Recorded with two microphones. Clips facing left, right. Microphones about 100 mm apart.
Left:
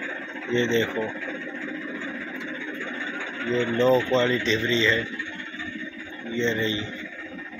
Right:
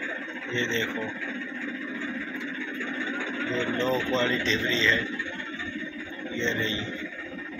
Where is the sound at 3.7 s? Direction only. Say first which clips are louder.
Left 9 dB; 30° left (ahead or behind).